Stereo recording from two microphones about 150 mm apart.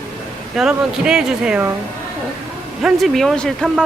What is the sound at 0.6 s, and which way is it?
Speech, 5° right (ahead or behind).